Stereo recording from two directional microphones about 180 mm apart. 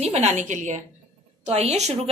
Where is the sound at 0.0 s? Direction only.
40° right (ahead or behind).